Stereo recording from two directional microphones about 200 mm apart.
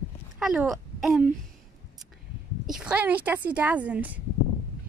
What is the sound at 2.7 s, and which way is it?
Speech, 5° right (ahead or behind).